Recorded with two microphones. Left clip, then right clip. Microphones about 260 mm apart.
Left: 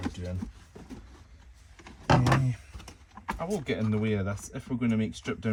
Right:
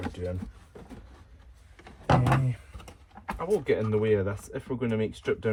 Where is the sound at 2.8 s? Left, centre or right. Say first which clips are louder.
Even; centre.